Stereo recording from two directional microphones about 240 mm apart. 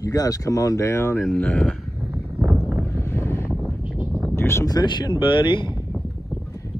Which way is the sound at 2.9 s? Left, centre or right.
Centre.